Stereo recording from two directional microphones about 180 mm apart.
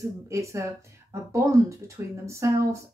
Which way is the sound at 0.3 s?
15° right (ahead or behind).